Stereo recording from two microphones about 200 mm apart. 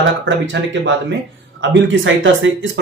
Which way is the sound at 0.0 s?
70° right (ahead or behind).